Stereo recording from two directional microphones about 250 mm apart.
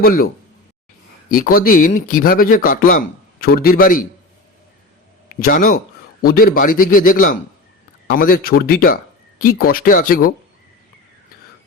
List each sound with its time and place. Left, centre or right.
0.0 s speech: left
1.3 s speech: left
5.4 s speech: left